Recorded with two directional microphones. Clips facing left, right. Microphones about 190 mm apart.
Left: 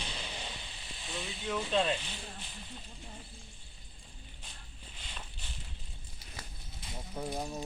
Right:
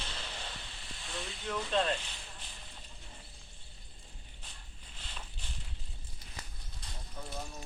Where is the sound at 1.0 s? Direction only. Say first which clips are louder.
Left 1 dB; 20° left (ahead or behind).